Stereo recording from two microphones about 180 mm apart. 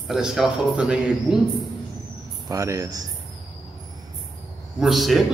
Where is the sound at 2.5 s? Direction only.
20° right (ahead or behind).